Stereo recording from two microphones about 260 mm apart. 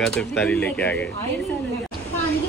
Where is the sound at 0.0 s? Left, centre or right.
Centre.